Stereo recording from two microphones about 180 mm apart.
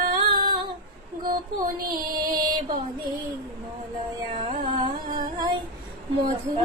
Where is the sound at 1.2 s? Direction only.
50° right (ahead or behind).